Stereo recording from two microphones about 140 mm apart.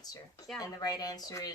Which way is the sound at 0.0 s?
25° left (ahead or behind).